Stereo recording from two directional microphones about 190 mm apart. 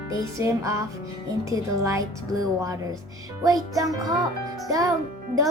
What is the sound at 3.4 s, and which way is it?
Speech, 20° right (ahead or behind).